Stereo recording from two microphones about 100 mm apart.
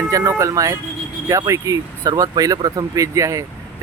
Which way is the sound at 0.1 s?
35° right (ahead or behind).